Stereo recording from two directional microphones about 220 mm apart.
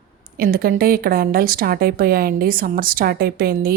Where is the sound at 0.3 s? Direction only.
40° right (ahead or behind).